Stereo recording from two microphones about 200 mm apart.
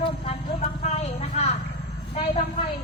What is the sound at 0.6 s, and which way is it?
Clip-clop, 35° left (ahead or behind).